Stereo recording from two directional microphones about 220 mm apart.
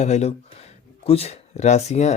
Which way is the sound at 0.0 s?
30° left (ahead or behind).